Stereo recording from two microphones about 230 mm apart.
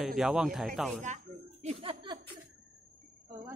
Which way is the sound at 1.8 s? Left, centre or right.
Right.